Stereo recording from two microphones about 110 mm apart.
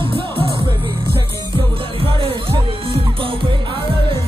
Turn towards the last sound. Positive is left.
turn(degrees=-55)  # may be behind; listen again after turning